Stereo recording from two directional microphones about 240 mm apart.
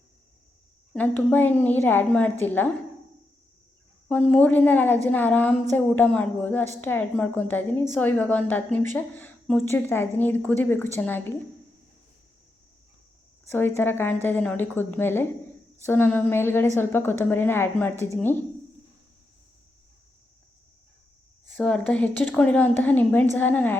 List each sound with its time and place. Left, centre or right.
0.9 s a woman's voice: centre
4.1 s a woman's voice: centre
13.5 s a woman's voice: centre
21.4 s a woman's voice: centre